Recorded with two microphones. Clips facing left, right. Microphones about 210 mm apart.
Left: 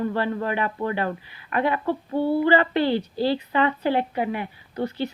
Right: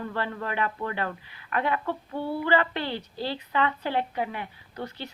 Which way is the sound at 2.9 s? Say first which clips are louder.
Left 9 dB; 35° left (ahead or behind).